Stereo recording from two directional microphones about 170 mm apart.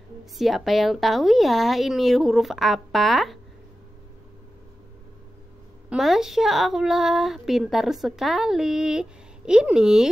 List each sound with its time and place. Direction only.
0.2 s a woman's voice: centre (ahead or behind)
5.9 s a woman's voice: centre (ahead or behind)